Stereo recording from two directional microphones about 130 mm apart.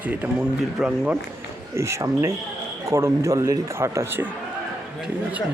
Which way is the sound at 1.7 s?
20° right (ahead or behind).